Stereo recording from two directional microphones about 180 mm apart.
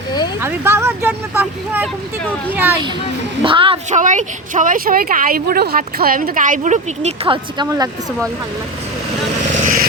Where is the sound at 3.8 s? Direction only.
40° right (ahead or behind).